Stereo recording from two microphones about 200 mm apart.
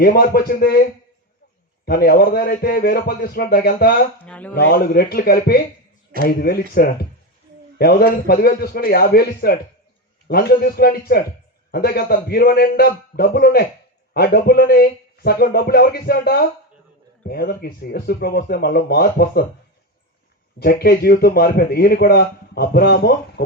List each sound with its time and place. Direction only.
0.0 s a man's voice: 50° left (ahead or behind)
4.3 s speech: 5° left (ahead or behind)
4.5 s a man's voice: 50° left (ahead or behind)
20.6 s a man's voice: 50° left (ahead or behind)